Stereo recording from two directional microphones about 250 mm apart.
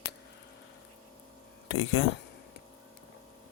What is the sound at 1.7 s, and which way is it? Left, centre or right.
Speech, left.